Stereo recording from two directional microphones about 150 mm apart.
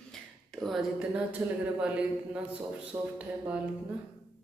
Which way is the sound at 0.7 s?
Centre (ahead or behind).